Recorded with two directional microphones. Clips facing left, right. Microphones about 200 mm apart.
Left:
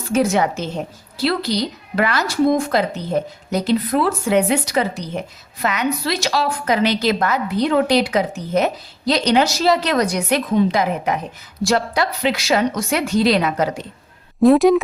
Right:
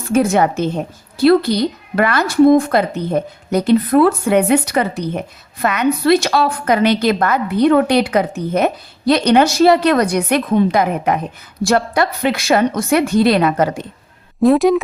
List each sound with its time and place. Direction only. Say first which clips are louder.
0.1 s a woman's voice: right 3 dB; 55° right (ahead or behind)
14.4 s a woman's voice: even; centre (ahead or behind)